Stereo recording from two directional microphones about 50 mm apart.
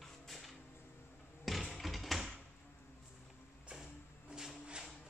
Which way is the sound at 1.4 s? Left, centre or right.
Centre.